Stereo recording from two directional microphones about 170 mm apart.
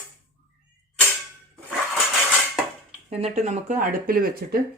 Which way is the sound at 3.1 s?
40° right (ahead or behind).